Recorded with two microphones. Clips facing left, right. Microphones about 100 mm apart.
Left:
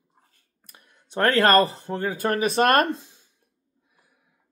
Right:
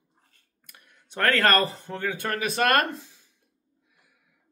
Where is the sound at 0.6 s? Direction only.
30° left (ahead or behind).